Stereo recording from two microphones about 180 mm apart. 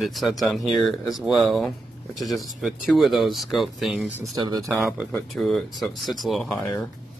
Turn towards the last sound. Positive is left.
turn(degrees=5)  # may be behind; listen again after turning